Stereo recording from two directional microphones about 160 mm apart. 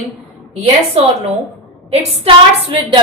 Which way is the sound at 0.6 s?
40° right (ahead or behind).